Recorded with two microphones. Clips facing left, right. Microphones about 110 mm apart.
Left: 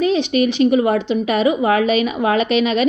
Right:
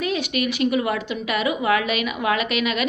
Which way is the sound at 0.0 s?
30° left (ahead or behind).